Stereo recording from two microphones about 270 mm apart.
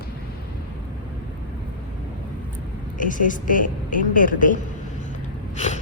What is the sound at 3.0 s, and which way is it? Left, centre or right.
A woman's voice, left.